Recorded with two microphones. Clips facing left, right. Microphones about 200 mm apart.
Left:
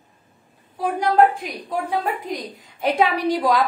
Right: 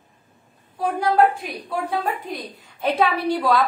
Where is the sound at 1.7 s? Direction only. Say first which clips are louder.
Left 1 dB; 15° left (ahead or behind).